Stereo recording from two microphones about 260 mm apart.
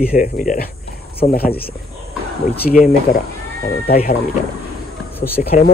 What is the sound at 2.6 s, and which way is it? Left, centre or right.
Speech, left.